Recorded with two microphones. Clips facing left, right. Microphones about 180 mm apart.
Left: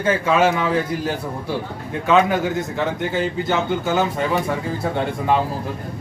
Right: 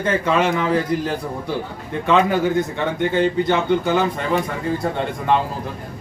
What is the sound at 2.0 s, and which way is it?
A man's voice, centre (ahead or behind).